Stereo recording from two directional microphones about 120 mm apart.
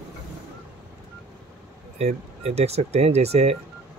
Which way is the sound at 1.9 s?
60° right (ahead or behind).